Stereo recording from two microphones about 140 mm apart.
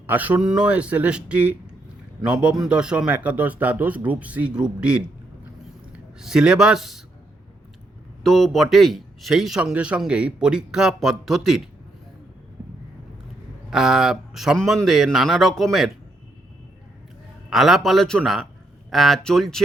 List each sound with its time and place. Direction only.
0.1 s speech: 10° right (ahead or behind)
8.2 s speech: centre (ahead or behind)
13.7 s speech: 5° right (ahead or behind)
17.5 s speech: centre (ahead or behind)